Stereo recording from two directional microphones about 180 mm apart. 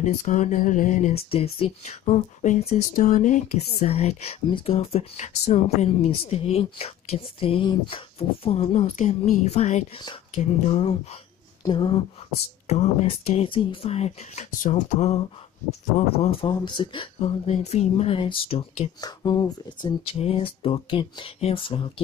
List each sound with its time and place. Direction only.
0.0 s speech: 45° left (ahead or behind)
1.3 s speech: 30° left (ahead or behind)